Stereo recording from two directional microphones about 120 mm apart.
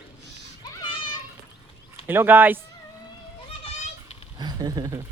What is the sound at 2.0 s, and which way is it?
Speech, 15° right (ahead or behind).